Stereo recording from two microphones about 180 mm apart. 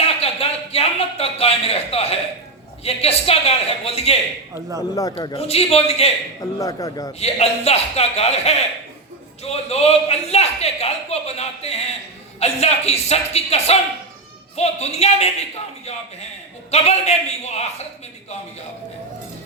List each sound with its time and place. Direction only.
0.0 s a sound: 35° left (ahead or behind)
2.8 s a man's voice: 35° left (ahead or behind)
6.6 s a man's voice: 20° left (ahead or behind)
7.2 s a man's voice: 35° left (ahead or behind)